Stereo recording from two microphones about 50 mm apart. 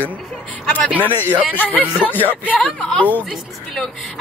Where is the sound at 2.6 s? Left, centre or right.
Centre.